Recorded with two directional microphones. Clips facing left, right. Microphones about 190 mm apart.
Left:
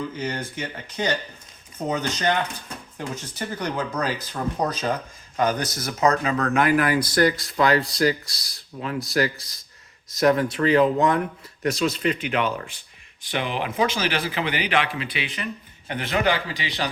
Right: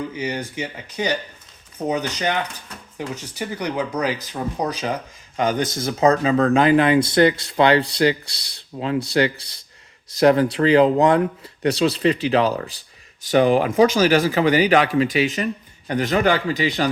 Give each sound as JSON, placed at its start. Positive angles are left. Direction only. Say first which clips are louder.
{"t": 0.1, "sound": "a man's voice", "louder": "right 3 dB", "side_deg": -15}